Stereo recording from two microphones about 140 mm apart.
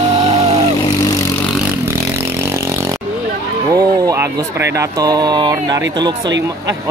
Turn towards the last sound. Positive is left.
turn(degrees=-30)  # may be behind; listen again after turning